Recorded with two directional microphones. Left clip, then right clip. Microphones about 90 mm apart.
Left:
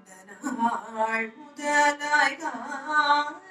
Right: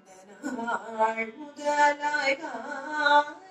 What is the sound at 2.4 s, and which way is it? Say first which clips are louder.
Female singing: left 2 dB; 30° left (ahead or behind).